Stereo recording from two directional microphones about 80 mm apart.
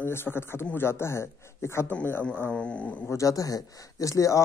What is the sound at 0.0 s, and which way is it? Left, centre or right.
Speech, left.